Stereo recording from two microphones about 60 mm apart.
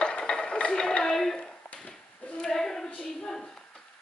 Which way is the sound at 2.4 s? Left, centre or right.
Centre.